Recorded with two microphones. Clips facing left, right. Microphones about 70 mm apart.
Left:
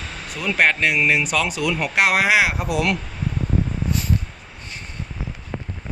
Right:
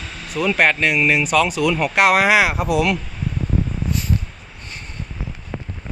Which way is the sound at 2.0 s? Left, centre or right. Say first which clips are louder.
Right 3 dB; right.